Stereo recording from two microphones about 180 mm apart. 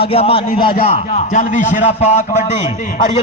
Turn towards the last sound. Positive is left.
turn(degrees=45)  # may be behind; listen again after turning